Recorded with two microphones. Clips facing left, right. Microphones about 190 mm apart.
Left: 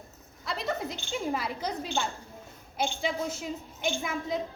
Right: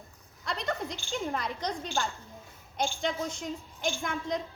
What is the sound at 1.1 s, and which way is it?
Speech, 5° left (ahead or behind).